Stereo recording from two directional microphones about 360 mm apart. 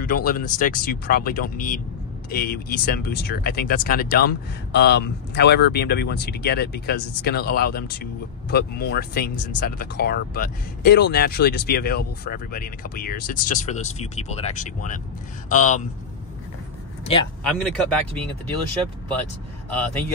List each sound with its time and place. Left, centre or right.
0.0 s speech: left
17.0 s speech: centre
17.4 s speech: centre